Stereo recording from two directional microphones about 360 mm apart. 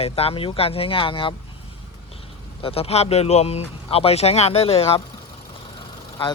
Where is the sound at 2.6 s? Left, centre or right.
Centre.